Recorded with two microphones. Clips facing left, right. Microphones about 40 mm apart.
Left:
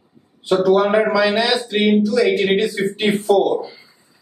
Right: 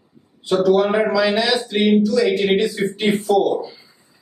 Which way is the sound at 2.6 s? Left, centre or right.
Centre.